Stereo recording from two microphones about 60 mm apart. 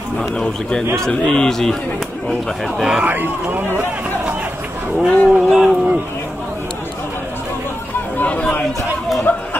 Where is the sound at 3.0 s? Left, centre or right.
Right.